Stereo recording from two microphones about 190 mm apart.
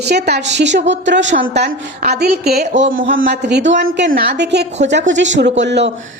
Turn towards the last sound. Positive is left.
turn(degrees=-65)  # may be behind; listen again after turning